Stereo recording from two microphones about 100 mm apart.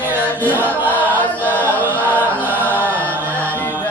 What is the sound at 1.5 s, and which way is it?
Chant, 20° right (ahead or behind).